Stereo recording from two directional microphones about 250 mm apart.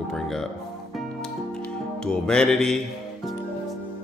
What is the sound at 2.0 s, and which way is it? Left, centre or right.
Speech, centre.